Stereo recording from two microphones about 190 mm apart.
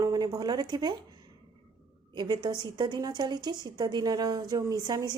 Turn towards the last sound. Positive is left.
turn(degrees=-20)  # may be behind; listen again after turning